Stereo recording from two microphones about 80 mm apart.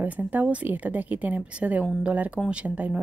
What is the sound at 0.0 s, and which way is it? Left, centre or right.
Speech, right.